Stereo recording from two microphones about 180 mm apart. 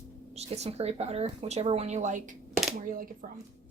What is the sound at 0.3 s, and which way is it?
Speech, 35° right (ahead or behind).